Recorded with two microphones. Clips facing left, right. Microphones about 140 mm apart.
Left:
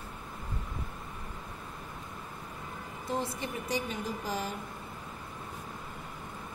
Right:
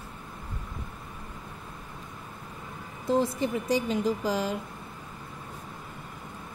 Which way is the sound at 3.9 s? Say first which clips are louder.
Right 8 dB; 90° right.